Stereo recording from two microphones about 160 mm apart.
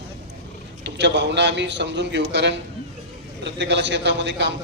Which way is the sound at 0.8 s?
90° right.